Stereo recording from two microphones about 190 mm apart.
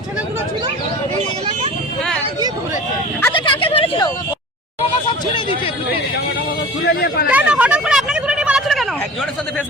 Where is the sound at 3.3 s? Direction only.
25° left (ahead or behind).